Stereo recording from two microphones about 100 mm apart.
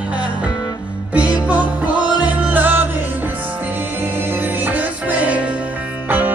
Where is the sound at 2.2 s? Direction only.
15° right (ahead or behind).